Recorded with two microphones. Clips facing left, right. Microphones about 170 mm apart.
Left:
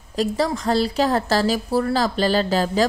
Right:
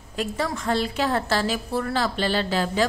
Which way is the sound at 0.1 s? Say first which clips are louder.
Left 6 dB; 35° left (ahead or behind).